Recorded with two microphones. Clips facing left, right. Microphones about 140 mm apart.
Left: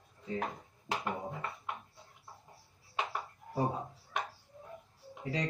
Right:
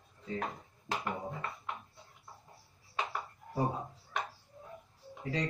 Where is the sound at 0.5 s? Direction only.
20° left (ahead or behind).